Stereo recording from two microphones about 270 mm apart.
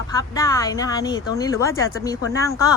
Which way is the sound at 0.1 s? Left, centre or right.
Centre.